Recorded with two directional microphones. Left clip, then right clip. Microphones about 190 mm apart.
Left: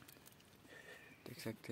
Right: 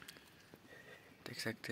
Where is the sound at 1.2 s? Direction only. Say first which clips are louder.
Right 6 dB; centre (ahead or behind).